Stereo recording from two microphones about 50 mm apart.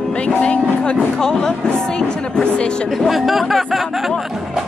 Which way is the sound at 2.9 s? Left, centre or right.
Centre.